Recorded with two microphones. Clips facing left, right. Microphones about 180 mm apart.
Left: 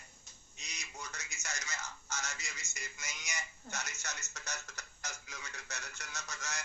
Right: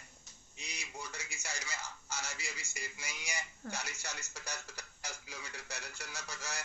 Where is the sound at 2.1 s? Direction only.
10° right (ahead or behind).